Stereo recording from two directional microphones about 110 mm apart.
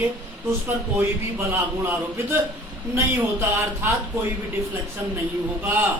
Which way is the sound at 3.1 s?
25° right (ahead or behind).